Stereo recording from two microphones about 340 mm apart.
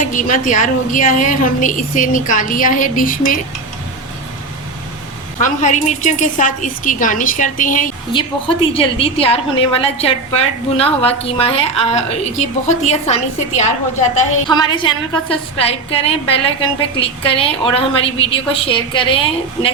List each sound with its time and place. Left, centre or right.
0.1 s a woman's voice: left
5.4 s a woman's voice: left
14.4 s a woman's voice: centre